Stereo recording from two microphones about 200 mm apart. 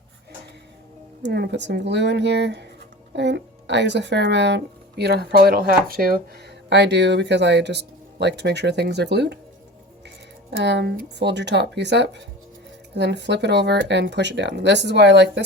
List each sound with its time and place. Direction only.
1.2 s speech: 55° right (ahead or behind)
6.7 s speech: 60° right (ahead or behind)
10.5 s speech: 60° right (ahead or behind)